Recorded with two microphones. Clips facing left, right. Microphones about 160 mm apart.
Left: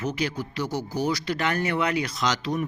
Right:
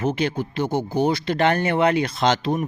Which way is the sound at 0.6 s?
55° right (ahead or behind).